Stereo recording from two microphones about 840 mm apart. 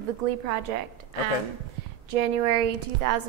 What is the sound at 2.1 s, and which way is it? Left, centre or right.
A woman's voice, right.